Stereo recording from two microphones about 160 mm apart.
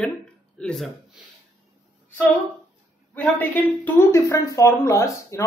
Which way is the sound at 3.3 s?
10° left (ahead or behind).